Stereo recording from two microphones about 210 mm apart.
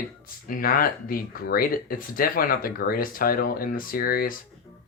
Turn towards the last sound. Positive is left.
turn(degrees=45)  # may be behind; listen again after turning